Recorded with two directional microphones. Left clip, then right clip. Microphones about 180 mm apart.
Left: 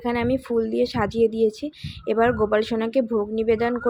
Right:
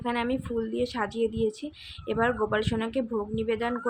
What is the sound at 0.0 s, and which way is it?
Speech, 20° left (ahead or behind).